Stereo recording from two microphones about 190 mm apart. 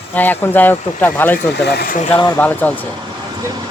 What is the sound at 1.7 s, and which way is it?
Speech, 55° left (ahead or behind).